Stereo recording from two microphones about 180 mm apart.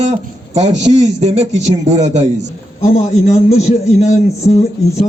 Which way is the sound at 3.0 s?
40° left (ahead or behind).